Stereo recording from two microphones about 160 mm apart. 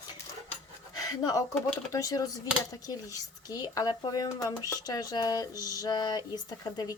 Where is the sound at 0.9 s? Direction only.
20° left (ahead or behind).